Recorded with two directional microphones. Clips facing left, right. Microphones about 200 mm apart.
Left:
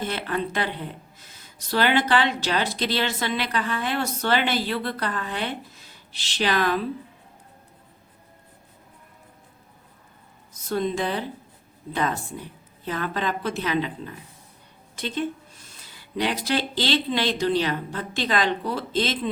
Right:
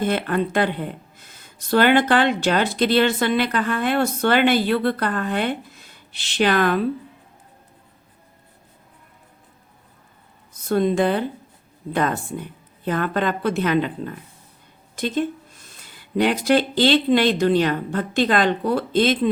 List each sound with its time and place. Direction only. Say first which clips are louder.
0.0 s speech: right 6 dB; 55° right (ahead or behind)
10.5 s speech: right 6 dB; 55° right (ahead or behind)